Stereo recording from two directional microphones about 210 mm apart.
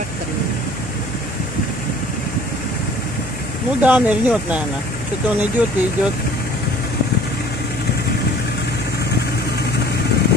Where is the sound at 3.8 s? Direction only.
5° right (ahead or behind).